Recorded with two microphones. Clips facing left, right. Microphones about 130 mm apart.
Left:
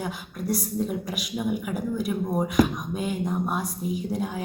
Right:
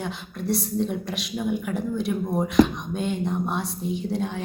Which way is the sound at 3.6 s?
30° right (ahead or behind).